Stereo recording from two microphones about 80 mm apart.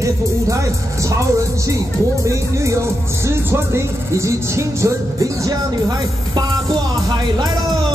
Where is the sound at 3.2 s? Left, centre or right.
Right.